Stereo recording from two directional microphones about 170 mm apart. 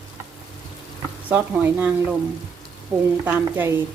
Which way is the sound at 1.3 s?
10° right (ahead or behind).